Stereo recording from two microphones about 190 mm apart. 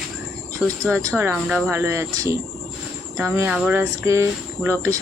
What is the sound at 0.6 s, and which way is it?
Speech, 5° left (ahead or behind).